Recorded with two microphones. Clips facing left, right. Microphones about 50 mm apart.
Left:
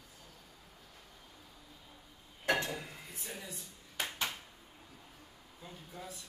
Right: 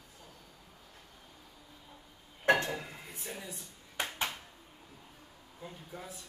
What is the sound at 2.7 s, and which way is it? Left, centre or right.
Dishes, centre.